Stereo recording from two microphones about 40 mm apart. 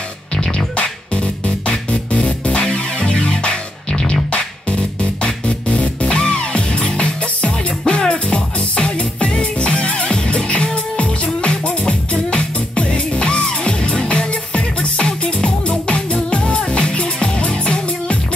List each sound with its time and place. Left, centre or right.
0.7 s music: left